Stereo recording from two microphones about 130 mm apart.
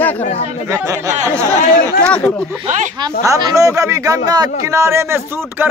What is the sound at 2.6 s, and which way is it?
Speech, 70° right (ahead or behind).